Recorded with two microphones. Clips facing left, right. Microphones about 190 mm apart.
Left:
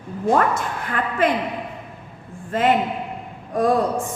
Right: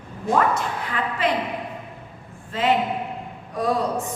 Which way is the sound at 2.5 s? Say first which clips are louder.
Left 2 dB; 50° left (ahead or behind).